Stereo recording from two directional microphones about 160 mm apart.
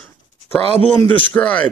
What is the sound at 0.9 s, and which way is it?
Speech, 10° left (ahead or behind).